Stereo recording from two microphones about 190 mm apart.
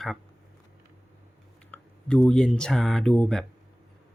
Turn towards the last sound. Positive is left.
turn(degrees=0)  # may be behind; listen again after turning